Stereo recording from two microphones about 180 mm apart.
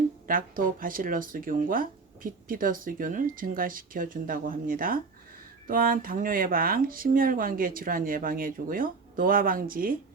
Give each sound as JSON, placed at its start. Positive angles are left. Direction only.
{"t": 0.3, "sound": "speech", "side_deg": -50}